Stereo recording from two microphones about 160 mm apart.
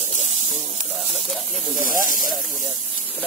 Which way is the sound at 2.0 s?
55° left (ahead or behind).